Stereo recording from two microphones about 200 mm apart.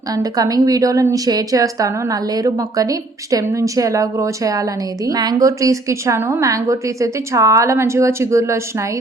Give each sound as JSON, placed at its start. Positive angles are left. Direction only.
{"t": 0.1, "sound": "a woman's voice", "side_deg": -20}